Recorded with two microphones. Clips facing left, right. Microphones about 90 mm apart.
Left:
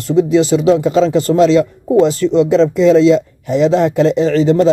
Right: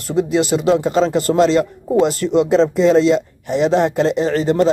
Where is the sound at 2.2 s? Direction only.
35° right (ahead or behind).